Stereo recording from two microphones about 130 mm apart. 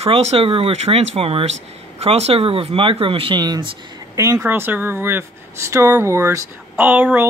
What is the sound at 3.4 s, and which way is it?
Speech, 30° right (ahead or behind).